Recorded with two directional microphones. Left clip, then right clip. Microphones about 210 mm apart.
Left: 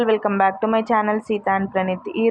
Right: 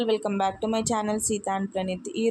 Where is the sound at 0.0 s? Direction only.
Centre (ahead or behind).